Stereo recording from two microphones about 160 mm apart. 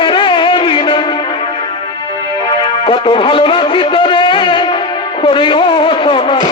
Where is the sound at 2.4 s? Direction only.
30° left (ahead or behind).